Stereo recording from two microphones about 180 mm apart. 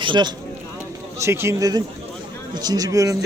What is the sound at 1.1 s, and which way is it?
A man's voice, 15° right (ahead or behind).